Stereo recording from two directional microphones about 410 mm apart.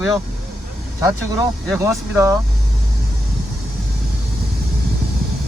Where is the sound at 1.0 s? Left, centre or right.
Centre.